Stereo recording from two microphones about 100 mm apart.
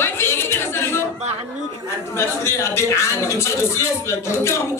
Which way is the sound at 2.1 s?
30° left (ahead or behind).